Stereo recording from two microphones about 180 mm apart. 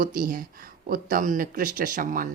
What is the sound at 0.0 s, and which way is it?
Speech, 55° right (ahead or behind).